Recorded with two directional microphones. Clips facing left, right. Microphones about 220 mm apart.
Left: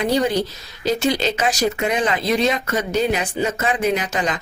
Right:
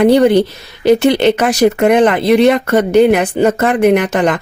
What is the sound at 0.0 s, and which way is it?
Speech, 60° right (ahead or behind).